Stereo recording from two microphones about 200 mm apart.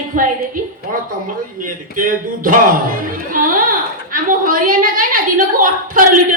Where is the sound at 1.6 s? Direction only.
45° right (ahead or behind).